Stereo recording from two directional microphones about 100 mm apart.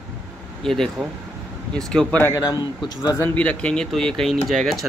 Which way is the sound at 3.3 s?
10° left (ahead or behind).